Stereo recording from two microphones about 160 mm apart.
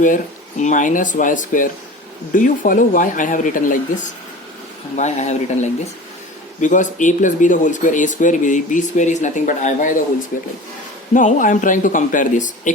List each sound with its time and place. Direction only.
0.6 s speech: 55° left (ahead or behind)
11.1 s speech: 55° left (ahead or behind)